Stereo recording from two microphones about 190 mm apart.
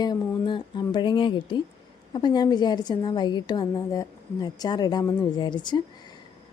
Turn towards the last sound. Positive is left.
turn(degrees=25)  # may be behind; listen again after turning